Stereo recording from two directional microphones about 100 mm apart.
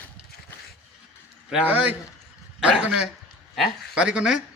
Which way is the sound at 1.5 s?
15° right (ahead or behind).